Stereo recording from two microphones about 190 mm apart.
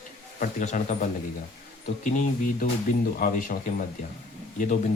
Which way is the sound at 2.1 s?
45° left (ahead or behind).